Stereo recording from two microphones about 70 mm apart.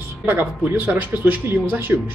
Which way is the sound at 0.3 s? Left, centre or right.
Right.